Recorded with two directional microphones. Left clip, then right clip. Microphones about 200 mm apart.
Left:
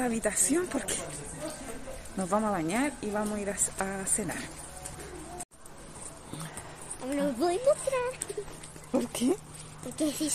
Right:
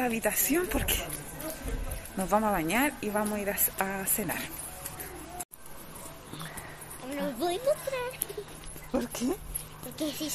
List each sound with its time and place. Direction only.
0.0 s a woman's voice: 5° left (ahead or behind)
2.2 s a woman's voice: centre (ahead or behind)
7.2 s a woman's voice: 55° left (ahead or behind)
8.9 s speech: 20° left (ahead or behind)
9.9 s a woman's voice: 55° left (ahead or behind)